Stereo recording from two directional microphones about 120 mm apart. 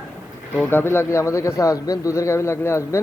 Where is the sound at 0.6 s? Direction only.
15° left (ahead or behind).